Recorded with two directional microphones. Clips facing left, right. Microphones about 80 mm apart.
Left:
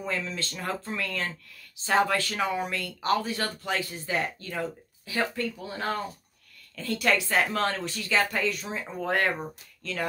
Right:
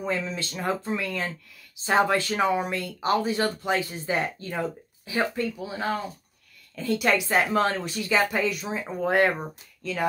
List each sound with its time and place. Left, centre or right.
0.0 s a woman's voice: right
5.6 s a woman's voice: centre